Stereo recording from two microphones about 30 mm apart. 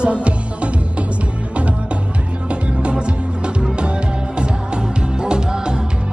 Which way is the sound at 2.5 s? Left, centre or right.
Right.